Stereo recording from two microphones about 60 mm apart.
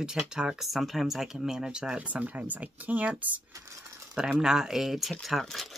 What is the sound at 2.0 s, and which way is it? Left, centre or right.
Speech, right.